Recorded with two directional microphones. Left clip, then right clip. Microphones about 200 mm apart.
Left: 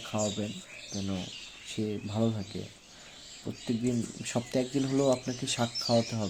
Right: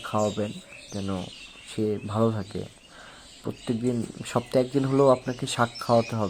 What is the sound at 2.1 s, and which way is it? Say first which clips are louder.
Speech: right 6 dB; 10° right (ahead or behind).